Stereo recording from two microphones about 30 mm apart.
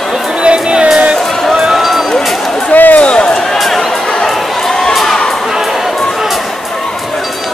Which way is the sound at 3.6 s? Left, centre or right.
Centre.